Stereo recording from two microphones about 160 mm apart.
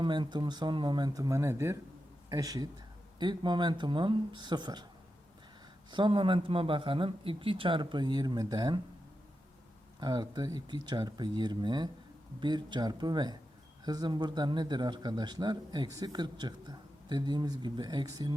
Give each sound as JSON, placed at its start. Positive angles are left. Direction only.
{"t": 0.0, "sound": "speech", "side_deg": -30}
{"t": 5.9, "sound": "speech", "side_deg": -30}
{"t": 10.0, "sound": "speech", "side_deg": -25}